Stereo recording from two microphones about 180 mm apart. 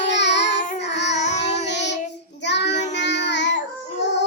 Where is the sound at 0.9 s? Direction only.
75° left (ahead or behind).